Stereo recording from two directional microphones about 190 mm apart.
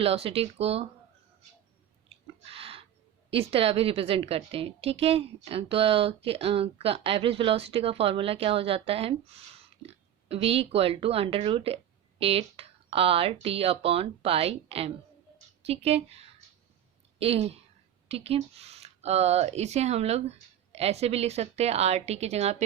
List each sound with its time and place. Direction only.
0.0 s a woman's voice: 30° right (ahead or behind)
2.5 s a sound: 30° right (ahead or behind)
3.2 s a woman's voice: 30° right (ahead or behind)